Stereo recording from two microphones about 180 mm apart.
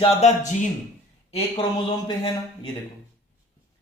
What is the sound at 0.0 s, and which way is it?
Speech, 40° left (ahead or behind).